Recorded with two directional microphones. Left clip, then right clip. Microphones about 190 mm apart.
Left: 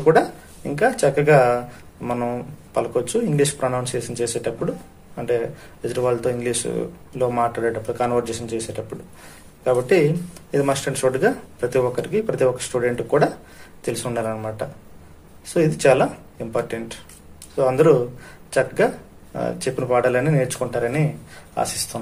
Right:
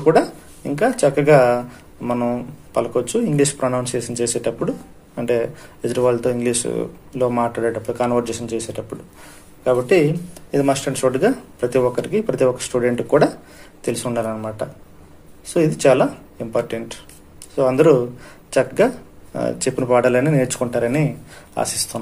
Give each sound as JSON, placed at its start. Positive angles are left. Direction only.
{"t": 0.0, "sound": "speech", "side_deg": -10}